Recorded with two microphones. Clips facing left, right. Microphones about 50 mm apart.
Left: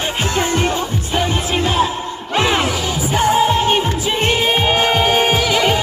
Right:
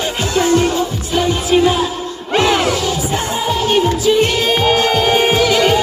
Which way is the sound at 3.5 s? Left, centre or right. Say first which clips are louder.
Right 1 dB; left.